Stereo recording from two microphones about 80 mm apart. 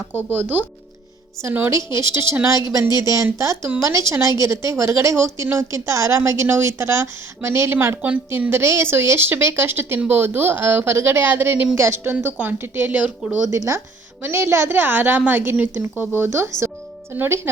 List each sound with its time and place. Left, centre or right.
0.3 s a woman's voice: right